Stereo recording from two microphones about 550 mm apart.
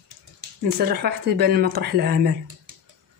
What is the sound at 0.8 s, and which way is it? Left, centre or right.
Speech, centre.